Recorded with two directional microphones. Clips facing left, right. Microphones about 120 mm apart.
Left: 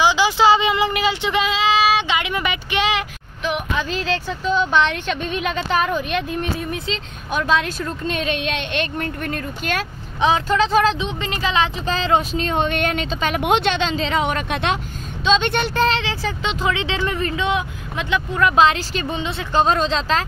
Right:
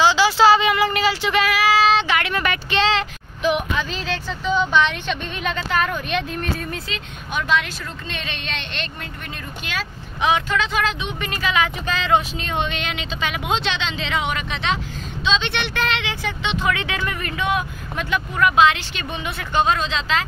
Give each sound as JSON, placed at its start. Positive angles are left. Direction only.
{"t": 0.0, "sound": "a sound", "side_deg": 15}
{"t": 1.9, "sound": "speech", "side_deg": 15}
{"t": 3.4, "sound": "speech", "side_deg": 0}
{"t": 7.4, "sound": "a woman's voice", "side_deg": 45}
{"t": 10.2, "sound": "speech", "side_deg": 35}
{"t": 13.4, "sound": "a woman's voice", "side_deg": 60}
{"t": 16.6, "sound": "speech", "side_deg": 25}
{"t": 18.6, "sound": "speech", "side_deg": 35}